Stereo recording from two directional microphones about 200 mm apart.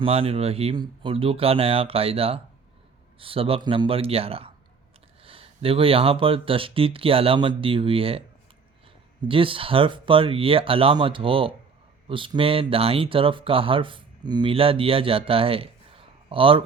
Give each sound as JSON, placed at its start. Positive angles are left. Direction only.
{"t": 0.0, "sound": "speech", "side_deg": -30}
{"t": 9.2, "sound": "speech", "side_deg": -25}